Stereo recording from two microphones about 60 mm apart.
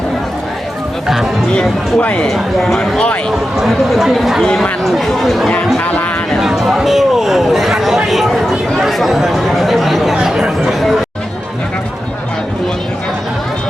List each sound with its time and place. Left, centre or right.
1.0 s speech: centre
2.0 s speech: left
2.2 s speech: centre